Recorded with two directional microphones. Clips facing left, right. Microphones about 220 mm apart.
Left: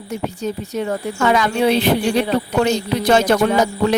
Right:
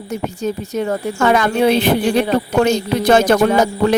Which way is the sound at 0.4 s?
50° right (ahead or behind).